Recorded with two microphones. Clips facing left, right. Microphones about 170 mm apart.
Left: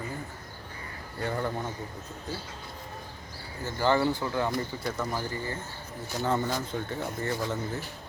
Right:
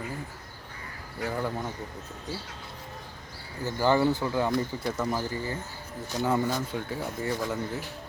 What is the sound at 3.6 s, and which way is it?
Speech, 15° right (ahead or behind).